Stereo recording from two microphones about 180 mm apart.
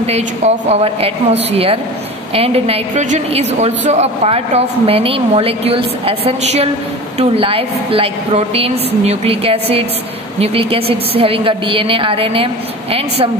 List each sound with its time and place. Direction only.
0.0 s a woman's voice: 35° right (ahead or behind)